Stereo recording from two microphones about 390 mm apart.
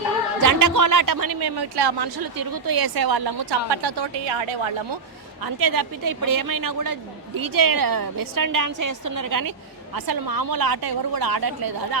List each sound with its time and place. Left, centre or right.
0.4 s a woman's voice: right
3.7 s a woman's voice: right
5.4 s a woman's voice: right